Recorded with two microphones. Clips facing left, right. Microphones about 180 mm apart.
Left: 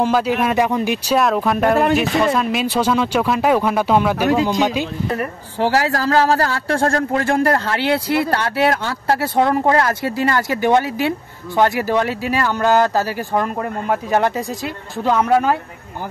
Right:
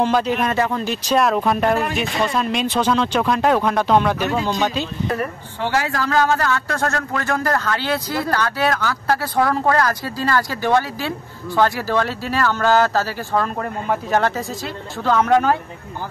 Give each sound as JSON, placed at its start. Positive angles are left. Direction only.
{"t": 0.0, "sound": "speech", "side_deg": 10}
{"t": 1.2, "sound": "speech", "side_deg": 0}
{"t": 5.6, "sound": "a man's voice", "side_deg": 35}